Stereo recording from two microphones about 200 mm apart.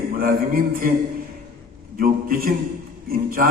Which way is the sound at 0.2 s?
45° right (ahead or behind).